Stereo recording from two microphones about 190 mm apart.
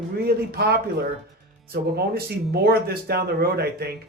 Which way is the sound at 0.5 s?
55° right (ahead or behind).